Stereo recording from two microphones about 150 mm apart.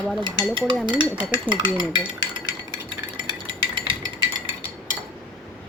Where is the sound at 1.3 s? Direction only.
30° right (ahead or behind).